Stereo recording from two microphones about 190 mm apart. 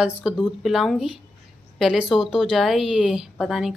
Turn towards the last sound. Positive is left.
turn(degrees=0)  # may be behind; listen again after turning